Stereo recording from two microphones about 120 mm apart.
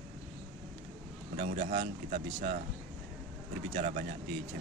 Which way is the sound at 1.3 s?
90° right.